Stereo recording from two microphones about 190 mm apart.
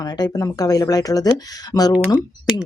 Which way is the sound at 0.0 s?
20° left (ahead or behind).